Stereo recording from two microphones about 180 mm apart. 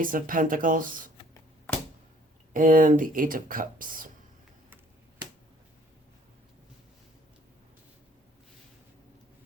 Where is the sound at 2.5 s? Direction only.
50° right (ahead or behind).